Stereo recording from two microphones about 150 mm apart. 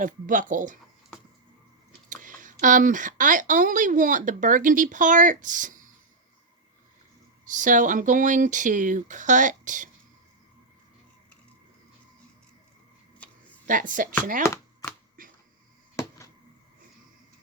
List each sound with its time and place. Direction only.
0.0 s speech: 60° right (ahead or behind)
2.0 s speech: 60° right (ahead or behind)
7.4 s speech: 60° right (ahead or behind)
13.2 s a sound: 10° left (ahead or behind)
13.7 s speech: 60° right (ahead or behind)
14.4 s chopping: 20° left (ahead or behind)
15.2 s finger snapping: 65° right (ahead or behind)